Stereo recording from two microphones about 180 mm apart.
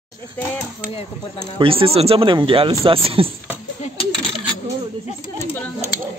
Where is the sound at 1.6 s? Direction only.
30° right (ahead or behind).